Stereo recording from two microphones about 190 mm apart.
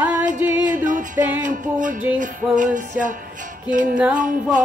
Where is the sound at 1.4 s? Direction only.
45° right (ahead or behind).